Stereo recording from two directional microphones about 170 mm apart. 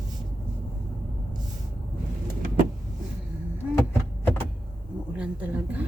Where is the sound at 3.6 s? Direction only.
10° right (ahead or behind).